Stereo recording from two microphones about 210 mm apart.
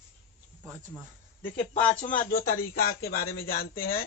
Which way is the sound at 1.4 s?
35° left (ahead or behind).